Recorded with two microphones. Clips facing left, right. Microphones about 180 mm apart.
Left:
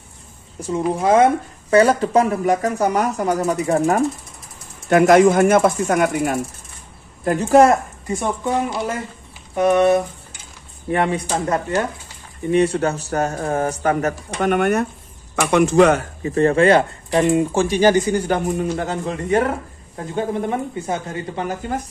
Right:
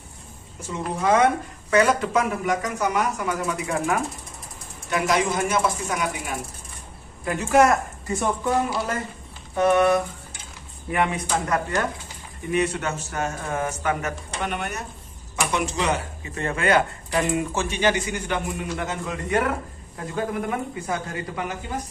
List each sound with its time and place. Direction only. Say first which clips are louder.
0.9 s speech: left 4 dB; 30° left (ahead or behind)
4.8 s speech: left 11 dB; 55° left (ahead or behind)
7.2 s speech: left 6 dB; 35° left (ahead or behind)
7.7 s a woman's voice: left 4 dB; 15° left (ahead or behind)
9.6 s speech: left 4 dB; 20° left (ahead or behind); by 16.0 s 55° left (ahead or behind)
16.2 s speech: left 12 dB; 35° left (ahead or behind)